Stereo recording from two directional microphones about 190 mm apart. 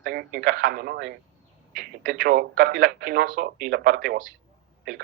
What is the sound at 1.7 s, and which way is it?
Speech, 45° right (ahead or behind).